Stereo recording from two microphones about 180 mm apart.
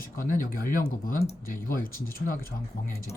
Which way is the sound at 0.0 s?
50° left (ahead or behind).